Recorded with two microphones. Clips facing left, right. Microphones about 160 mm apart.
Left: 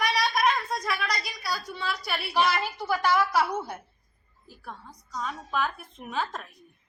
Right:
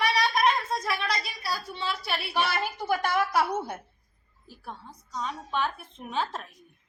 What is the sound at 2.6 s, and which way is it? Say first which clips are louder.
A woman's voice: left 1 dB; 50° right (ahead or behind).